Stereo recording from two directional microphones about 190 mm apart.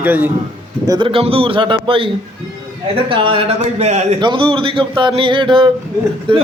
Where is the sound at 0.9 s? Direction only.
25° right (ahead or behind).